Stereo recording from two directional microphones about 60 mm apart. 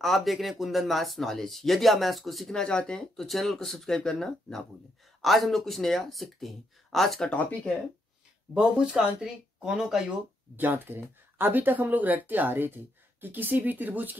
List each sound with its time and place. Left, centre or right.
0.0 s speech: centre
2.6 s speech: centre
8.5 s speech: centre
10.5 s speech: right